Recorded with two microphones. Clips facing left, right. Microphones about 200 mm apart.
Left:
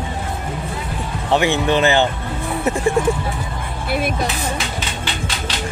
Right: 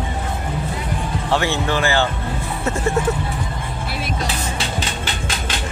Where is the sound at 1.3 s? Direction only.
15° left (ahead or behind).